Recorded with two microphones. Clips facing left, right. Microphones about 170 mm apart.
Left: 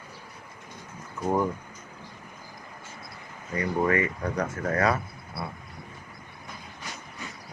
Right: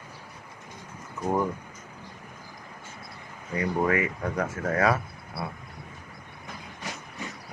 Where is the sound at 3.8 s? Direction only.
5° right (ahead or behind).